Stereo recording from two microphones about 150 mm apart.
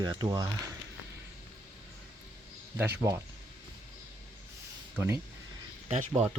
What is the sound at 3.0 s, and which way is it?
Speech, 20° right (ahead or behind).